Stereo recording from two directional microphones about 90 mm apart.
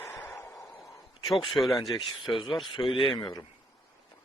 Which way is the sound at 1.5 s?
Centre (ahead or behind).